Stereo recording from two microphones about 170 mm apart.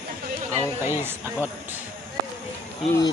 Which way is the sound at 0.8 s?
15° right (ahead or behind).